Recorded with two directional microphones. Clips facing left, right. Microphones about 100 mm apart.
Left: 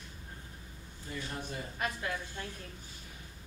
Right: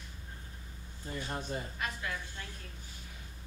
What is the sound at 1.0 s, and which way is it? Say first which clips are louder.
Speech: right 2 dB; 35° right (ahead or behind).